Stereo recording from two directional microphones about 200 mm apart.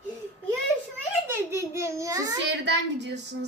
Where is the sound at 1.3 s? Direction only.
15° right (ahead or behind).